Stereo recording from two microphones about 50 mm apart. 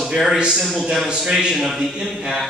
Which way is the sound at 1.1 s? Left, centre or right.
Centre.